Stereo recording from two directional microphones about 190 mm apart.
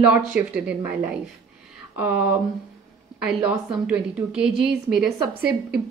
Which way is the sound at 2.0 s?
10° right (ahead or behind).